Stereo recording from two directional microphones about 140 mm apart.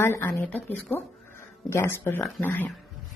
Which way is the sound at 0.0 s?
15° left (ahead or behind).